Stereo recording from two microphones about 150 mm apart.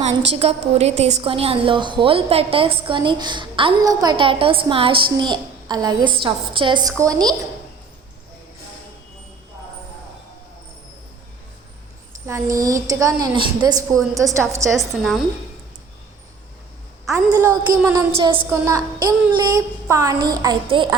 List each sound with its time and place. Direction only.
0.0 s a woman's voice: 45° right (ahead or behind); by 7.4 s 25° right (ahead or behind)
12.2 s a woman's voice: 20° right (ahead or behind)
14.8 s a woman's voice: centre (ahead or behind)
17.1 s a woman's voice: 20° right (ahead or behind)
18.2 s a woman's voice: 35° right (ahead or behind)
18.5 s a woman's voice: 20° right (ahead or behind)